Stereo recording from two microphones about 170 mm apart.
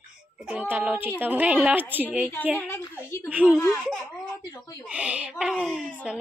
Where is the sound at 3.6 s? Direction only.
15° left (ahead or behind).